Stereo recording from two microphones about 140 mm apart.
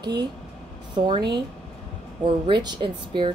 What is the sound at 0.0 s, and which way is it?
Speech, 30° right (ahead or behind).